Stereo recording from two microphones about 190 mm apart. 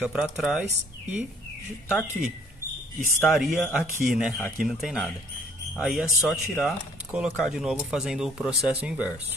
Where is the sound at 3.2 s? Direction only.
Centre (ahead or behind).